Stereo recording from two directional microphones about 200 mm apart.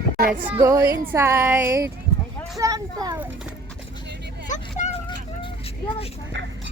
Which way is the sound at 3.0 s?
15° right (ahead or behind).